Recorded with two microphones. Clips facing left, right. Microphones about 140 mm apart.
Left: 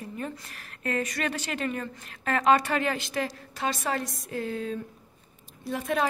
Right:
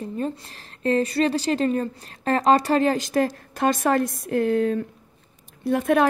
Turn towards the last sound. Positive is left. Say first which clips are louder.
# right 8 dB
turn(degrees=-55)  # may be behind; listen again after turning